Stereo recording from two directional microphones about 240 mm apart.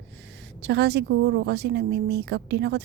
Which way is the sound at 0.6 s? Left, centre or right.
Right.